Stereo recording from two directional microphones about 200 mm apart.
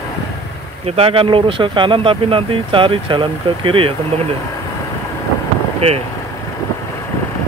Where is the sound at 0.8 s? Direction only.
30° right (ahead or behind).